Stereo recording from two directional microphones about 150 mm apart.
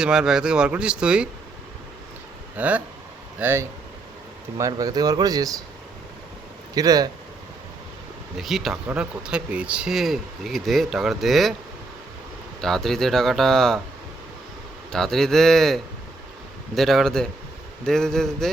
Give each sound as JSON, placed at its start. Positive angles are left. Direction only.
{"t": 0.0, "sound": "speech", "side_deg": -5}
{"t": 2.6, "sound": "speech", "side_deg": -10}
{"t": 6.7, "sound": "speech", "side_deg": -25}
{"t": 8.4, "sound": "speech", "side_deg": 0}
{"t": 12.6, "sound": "speech", "side_deg": 5}
{"t": 14.9, "sound": "speech", "side_deg": 0}